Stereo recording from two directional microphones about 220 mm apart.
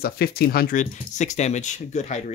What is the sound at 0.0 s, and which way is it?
Speech, 45° left (ahead or behind).